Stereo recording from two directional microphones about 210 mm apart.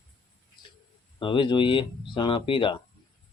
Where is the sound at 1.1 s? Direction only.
25° left (ahead or behind).